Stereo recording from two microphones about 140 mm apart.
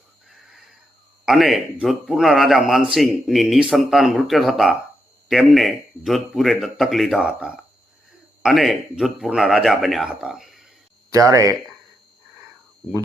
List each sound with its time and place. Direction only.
1.2 s a man's voice: centre (ahead or behind)
11.1 s speech: 25° right (ahead or behind)